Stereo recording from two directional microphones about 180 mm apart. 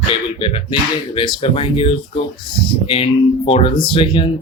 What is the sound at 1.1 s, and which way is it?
Speech, 30° left (ahead or behind).